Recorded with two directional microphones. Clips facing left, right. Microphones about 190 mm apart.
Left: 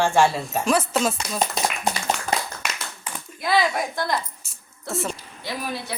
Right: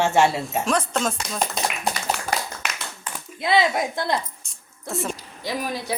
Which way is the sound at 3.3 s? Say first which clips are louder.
Right 1 dB; 25° right (ahead or behind).